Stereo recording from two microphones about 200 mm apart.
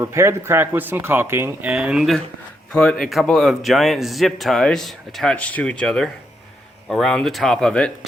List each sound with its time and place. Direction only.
0.0 s a man's voice: 15° right (ahead or behind); by 7.9 s 5° left (ahead or behind)